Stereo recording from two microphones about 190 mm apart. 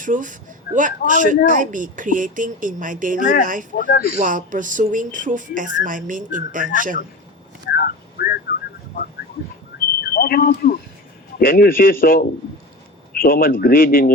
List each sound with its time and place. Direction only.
0.0 s speech: 45° right (ahead or behind)
3.8 s a man's voice: 45° left (ahead or behind)
4.2 s speech: 45° right (ahead or behind)
7.6 s a sound: 55° left (ahead or behind)
10.2 s a man's voice: 50° left (ahead or behind)